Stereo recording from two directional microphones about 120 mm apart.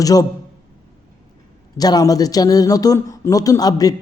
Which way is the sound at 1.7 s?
30° left (ahead or behind).